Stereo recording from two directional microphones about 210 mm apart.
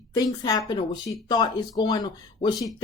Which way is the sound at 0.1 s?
20° left (ahead or behind).